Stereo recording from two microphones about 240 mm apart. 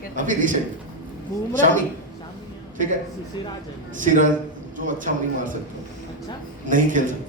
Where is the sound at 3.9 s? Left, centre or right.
Right.